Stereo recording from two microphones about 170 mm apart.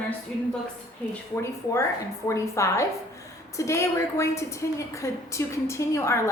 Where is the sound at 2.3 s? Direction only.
15° left (ahead or behind).